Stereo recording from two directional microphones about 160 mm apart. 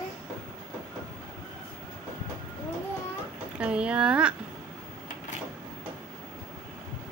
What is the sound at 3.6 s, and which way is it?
Speech, 5° right (ahead or behind).